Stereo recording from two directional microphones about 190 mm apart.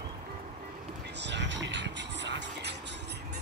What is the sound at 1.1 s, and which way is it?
Vehicle, 65° right (ahead or behind).